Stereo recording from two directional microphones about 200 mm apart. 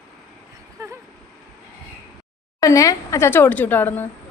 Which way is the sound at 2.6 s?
15° left (ahead or behind).